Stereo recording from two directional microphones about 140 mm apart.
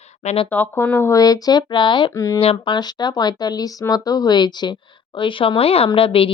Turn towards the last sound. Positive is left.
turn(degrees=40)  # may be behind; listen again after turning